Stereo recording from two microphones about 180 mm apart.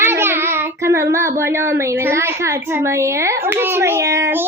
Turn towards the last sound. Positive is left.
turn(degrees=-15)  # may be behind; listen again after turning